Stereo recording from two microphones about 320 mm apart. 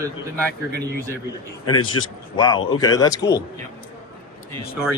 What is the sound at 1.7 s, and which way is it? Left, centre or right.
Speech, centre.